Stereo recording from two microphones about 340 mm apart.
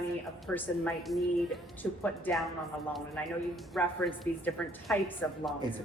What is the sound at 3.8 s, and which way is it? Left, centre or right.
A man's voice, centre.